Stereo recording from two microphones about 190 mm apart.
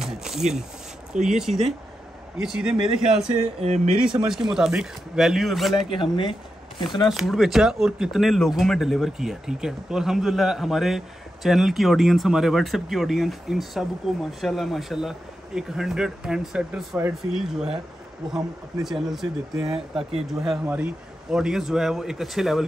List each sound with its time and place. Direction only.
0.0 s a sound: centre (ahead or behind)
1.2 s speech: centre (ahead or behind)
3.6 s speech: 35° right (ahead or behind)
3.9 s speech: 5° right (ahead or behind)
5.9 s speech: 25° left (ahead or behind)
7.1 s speech: centre (ahead or behind)
18.9 s speech: centre (ahead or behind)
20.0 s speech: 30° right (ahead or behind)
20.3 s speech: centre (ahead or behind)